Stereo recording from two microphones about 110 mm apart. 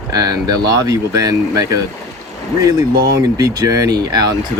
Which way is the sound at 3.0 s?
35° right (ahead or behind).